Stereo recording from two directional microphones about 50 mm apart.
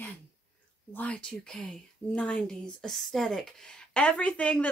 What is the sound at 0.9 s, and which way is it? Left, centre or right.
Speech, left.